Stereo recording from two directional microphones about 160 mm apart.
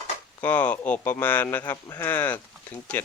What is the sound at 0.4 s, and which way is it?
Speech, 10° left (ahead or behind).